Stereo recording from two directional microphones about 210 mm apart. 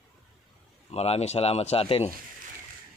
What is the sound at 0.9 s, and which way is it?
Speech, 30° left (ahead or behind).